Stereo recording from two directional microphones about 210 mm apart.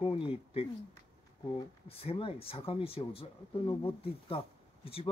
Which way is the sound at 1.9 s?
25° left (ahead or behind).